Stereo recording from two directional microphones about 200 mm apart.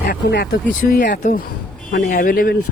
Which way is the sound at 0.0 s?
50° left (ahead or behind).